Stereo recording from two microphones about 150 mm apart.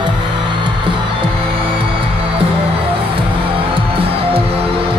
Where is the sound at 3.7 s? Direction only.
40° right (ahead or behind).